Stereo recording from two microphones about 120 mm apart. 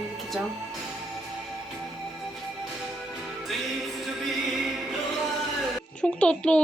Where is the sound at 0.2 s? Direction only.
Centre (ahead or behind).